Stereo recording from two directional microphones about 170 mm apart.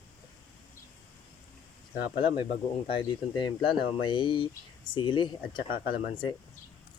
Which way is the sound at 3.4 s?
30° left (ahead or behind).